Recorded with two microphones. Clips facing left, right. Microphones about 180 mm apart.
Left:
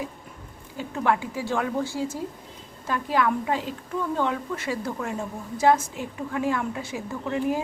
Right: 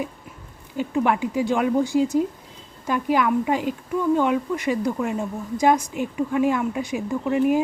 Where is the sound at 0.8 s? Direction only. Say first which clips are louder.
Right 4 dB; 15° right (ahead or behind).